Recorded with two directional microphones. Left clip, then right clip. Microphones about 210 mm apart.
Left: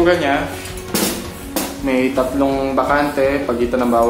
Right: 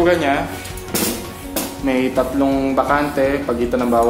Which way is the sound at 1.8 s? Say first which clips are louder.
Left 1 dB; 30° right (ahead or behind).